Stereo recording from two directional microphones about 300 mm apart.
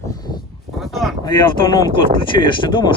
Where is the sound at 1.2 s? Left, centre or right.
Centre.